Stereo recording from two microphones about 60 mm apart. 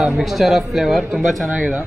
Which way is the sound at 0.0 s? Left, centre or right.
Centre.